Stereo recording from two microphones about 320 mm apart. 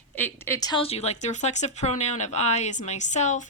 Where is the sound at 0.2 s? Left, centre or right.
Centre.